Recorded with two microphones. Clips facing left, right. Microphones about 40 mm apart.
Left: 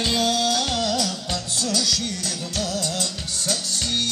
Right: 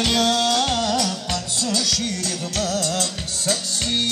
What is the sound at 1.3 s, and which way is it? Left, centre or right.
Music, right.